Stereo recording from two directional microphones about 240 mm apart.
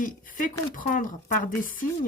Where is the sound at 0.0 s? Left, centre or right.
Left.